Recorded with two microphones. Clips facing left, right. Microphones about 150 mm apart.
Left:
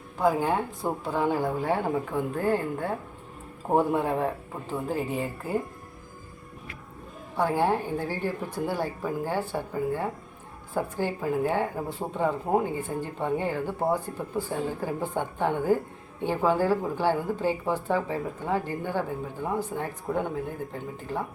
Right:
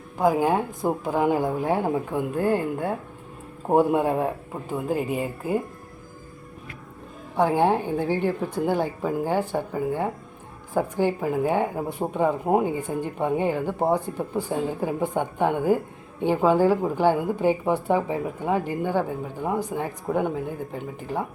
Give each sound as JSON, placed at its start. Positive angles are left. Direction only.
{"t": 0.2, "sound": "a woman's voice", "side_deg": -15}
{"t": 7.3, "sound": "a woman's voice", "side_deg": -15}